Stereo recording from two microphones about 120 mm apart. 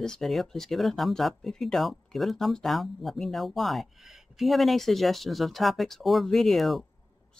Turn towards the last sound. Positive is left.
turn(degrees=0)  # may be behind; listen again after turning